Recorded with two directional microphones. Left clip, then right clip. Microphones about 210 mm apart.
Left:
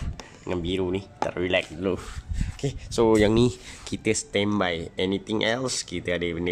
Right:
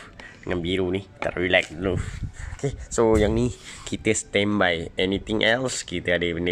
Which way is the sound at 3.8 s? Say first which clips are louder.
Right 2 dB; centre (ahead or behind).